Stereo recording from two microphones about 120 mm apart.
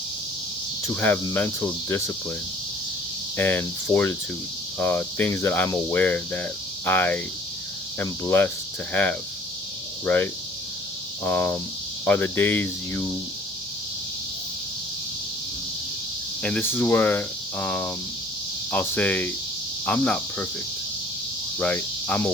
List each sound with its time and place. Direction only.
0.9 s cricket: 20° left (ahead or behind)
3.3 s speech: 15° left (ahead or behind)
6.8 s cricket: 20° left (ahead or behind)
8.9 s speech: 15° left (ahead or behind)
11.2 s cricket: 20° left (ahead or behind)
12.0 s speech: 15° left (ahead or behind)
16.4 s speech: 15° left (ahead or behind)
21.6 s speech: 10° left (ahead or behind)